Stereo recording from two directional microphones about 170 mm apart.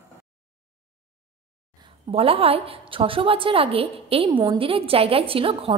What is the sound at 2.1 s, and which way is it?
A woman's voice, 35° right (ahead or behind).